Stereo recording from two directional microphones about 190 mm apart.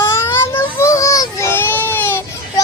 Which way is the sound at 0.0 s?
15° left (ahead or behind).